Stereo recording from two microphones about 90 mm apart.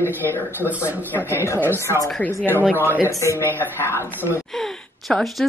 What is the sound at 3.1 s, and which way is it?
Speech, 35° left (ahead or behind).